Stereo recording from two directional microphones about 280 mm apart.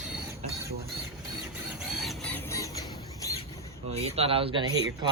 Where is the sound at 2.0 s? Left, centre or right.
Centre.